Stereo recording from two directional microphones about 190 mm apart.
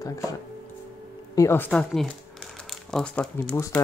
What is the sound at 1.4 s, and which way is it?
Speech, 10° left (ahead or behind).